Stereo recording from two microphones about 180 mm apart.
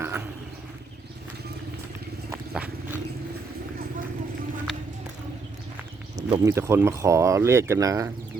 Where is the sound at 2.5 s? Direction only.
5° right (ahead or behind).